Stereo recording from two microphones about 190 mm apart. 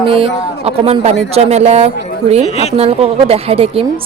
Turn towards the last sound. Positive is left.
turn(degrees=-30)  # may be behind; listen again after turning